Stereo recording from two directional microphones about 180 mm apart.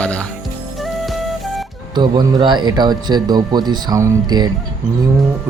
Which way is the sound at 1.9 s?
25° right (ahead or behind).